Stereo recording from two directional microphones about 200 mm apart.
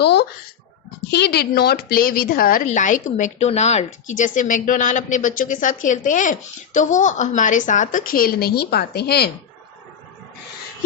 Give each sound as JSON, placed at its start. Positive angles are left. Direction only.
{"t": 0.0, "sound": "a child's voice", "side_deg": 55}